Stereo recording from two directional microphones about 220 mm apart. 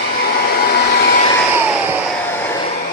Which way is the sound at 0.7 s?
45° left (ahead or behind).